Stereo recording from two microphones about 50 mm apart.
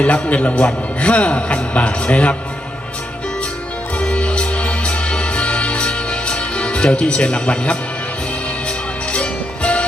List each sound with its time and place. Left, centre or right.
0.0 s a man's voice: left
3.9 s music: left
9.1 s music: left